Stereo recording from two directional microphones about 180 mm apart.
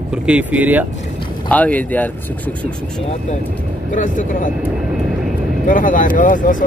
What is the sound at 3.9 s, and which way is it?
Speech, 45° left (ahead or behind).